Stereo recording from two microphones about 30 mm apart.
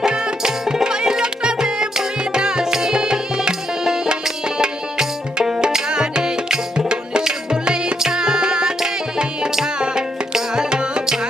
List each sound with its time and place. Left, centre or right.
0.0 s music: right
0.6 s music: centre
10.5 s music: right
11.0 s music: centre